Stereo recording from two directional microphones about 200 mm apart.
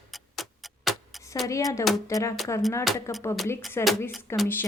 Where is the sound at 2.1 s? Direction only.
15° left (ahead or behind).